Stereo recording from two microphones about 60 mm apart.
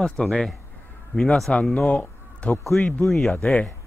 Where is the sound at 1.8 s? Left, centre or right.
Left.